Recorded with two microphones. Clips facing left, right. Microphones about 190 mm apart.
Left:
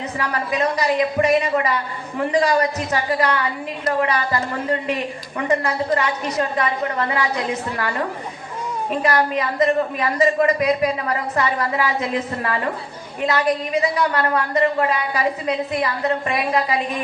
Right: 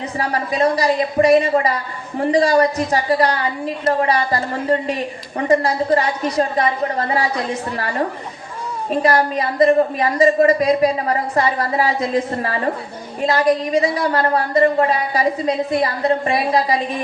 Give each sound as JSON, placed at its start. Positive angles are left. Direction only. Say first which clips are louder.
{"t": 0.2, "sound": "a woman's voice", "louder": "right 4 dB", "side_deg": -35}
{"t": 9.0, "sound": "a woman's voice", "louder": "right 3 dB", "side_deg": -35}